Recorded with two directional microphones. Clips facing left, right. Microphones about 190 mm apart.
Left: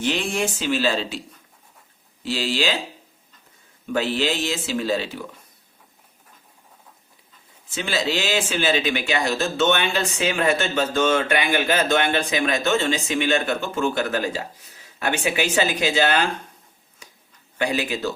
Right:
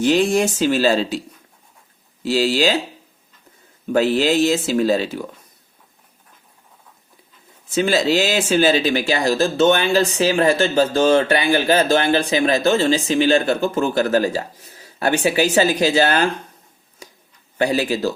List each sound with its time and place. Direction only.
0.0 s speech: 40° right (ahead or behind)
2.2 s speech: 40° right (ahead or behind)
3.8 s speech: 40° right (ahead or behind)
7.7 s speech: 40° right (ahead or behind)
17.6 s speech: 35° right (ahead or behind)